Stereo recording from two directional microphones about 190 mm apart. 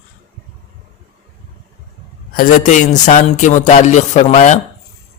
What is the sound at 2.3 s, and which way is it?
Speech, 40° left (ahead or behind).